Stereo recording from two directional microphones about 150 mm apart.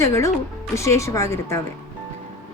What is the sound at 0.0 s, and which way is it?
Speech, 20° left (ahead or behind).